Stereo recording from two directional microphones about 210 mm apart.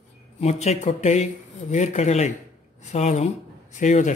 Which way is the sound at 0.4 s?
30° left (ahead or behind).